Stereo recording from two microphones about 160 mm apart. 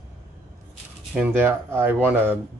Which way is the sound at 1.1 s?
10° right (ahead or behind).